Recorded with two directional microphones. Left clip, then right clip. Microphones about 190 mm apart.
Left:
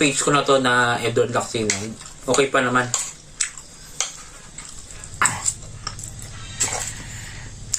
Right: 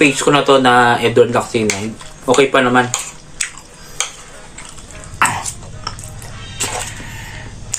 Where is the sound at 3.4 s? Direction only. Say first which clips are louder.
Right 4 dB; 15° left (ahead or behind).